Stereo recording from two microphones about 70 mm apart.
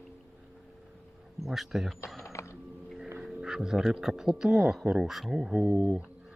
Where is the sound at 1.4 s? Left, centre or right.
Centre.